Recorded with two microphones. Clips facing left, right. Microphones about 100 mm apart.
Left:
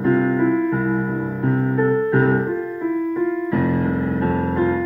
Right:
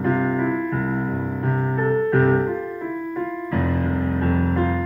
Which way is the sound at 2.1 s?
5° left (ahead or behind).